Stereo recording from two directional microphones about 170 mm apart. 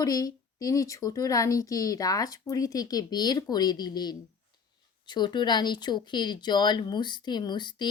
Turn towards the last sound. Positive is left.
turn(degrees=25)  # may be behind; listen again after turning